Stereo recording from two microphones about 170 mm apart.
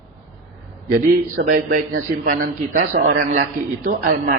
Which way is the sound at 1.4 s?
90° right.